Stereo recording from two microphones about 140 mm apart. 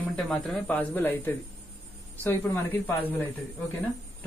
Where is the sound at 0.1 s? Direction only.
5° left (ahead or behind).